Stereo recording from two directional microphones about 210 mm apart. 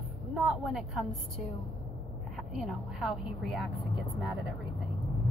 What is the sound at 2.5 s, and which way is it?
A woman's voice, centre (ahead or behind).